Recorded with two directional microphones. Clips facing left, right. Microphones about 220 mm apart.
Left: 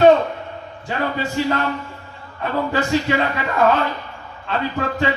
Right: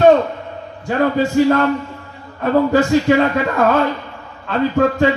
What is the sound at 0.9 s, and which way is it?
A man's voice, 45° right (ahead or behind).